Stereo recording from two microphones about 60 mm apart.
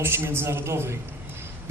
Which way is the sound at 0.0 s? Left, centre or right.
Right.